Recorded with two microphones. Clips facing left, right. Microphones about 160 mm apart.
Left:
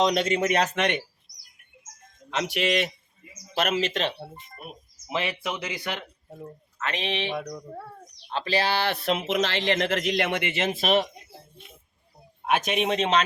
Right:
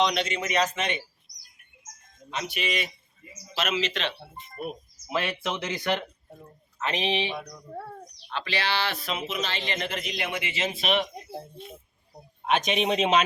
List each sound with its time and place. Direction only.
0.0 s a man's voice: 45° left (ahead or behind); by 1.0 s 65° left (ahead or behind)
2.3 s speech: 80° left
3.5 s a man's voice: 55° left (ahead or behind)
5.0 s speech: 15° left (ahead or behind)
6.7 s speech: 20° right (ahead or behind)
8.3 s speech: 35° left (ahead or behind)
12.5 s speech: 5° left (ahead or behind)